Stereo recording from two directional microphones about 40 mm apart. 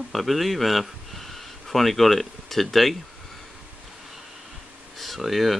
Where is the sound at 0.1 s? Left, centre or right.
Centre.